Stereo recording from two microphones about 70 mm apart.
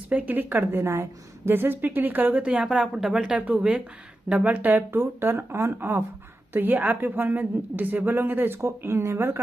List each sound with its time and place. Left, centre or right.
0.1 s a woman's voice: right
3.4 s a woman's voice: right